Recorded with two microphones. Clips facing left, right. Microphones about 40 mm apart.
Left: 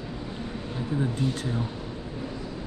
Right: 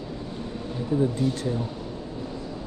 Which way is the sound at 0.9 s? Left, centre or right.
Left.